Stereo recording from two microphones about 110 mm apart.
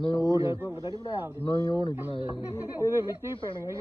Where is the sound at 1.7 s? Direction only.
45° left (ahead or behind).